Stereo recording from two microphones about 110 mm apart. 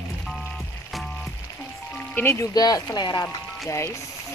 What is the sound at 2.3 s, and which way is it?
Speech, 35° left (ahead or behind).